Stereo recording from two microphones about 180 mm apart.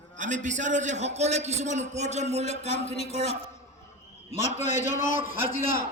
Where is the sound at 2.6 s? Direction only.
35° left (ahead or behind).